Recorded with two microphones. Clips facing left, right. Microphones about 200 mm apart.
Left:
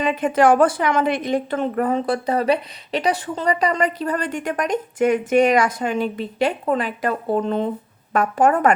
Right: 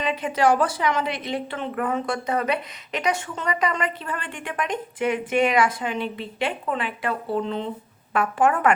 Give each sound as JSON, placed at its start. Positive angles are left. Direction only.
{"t": 0.0, "sound": "a woman's voice", "side_deg": 50}